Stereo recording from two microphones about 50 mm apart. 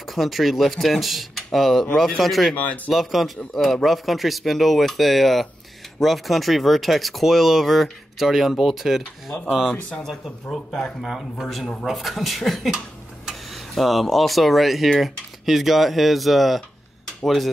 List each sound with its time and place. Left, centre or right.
0.1 s speech: centre
2.5 s speech: left
2.9 s speech: centre
10.0 s speech: centre